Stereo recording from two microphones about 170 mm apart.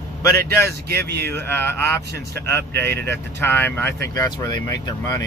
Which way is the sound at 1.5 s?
15° left (ahead or behind).